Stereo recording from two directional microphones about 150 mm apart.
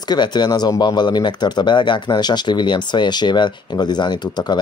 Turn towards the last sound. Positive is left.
turn(degrees=30)  # may be behind; listen again after turning